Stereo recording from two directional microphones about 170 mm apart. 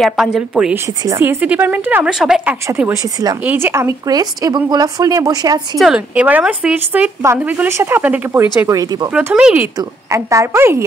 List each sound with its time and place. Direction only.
0.0 s a woman's voice: 5° right (ahead or behind)
1.0 s speech: 15° right (ahead or behind)
2.7 s speech: 15° right (ahead or behind)
5.8 s speech: 5° right (ahead or behind)
9.1 s speech: 5° right (ahead or behind)
9.8 s speech: 15° right (ahead or behind)